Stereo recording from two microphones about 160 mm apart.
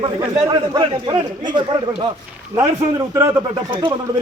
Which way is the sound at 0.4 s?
25° right (ahead or behind).